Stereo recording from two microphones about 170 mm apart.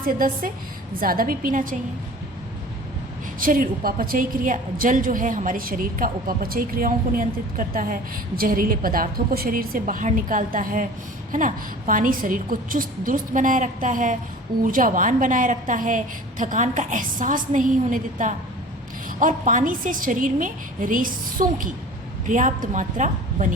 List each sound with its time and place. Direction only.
0.0 s a woman's voice: 55° right (ahead or behind)
3.4 s a woman's voice: 55° right (ahead or behind)